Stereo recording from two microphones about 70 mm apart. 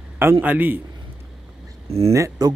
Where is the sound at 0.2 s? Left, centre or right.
Right.